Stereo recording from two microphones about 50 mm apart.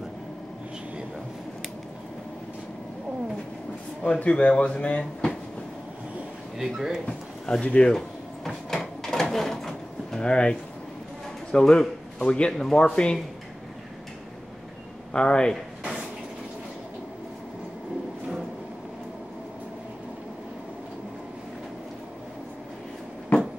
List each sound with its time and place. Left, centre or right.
4.0 s speech: left
6.6 s speech: centre
7.1 s a sound: centre
7.6 s speech: left
8.5 s drawer open or close: centre
10.2 s speech: centre
15.1 s speech: centre